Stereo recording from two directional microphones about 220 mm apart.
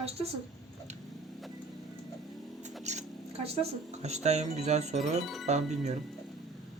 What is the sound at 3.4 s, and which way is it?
Speech, 30° right (ahead or behind).